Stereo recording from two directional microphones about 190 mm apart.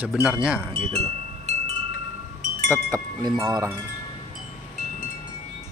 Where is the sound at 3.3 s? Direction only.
20° right (ahead or behind).